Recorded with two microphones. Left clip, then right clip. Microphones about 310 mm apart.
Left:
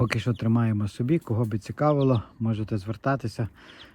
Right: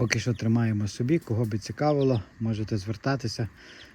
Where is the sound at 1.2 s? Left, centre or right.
Left.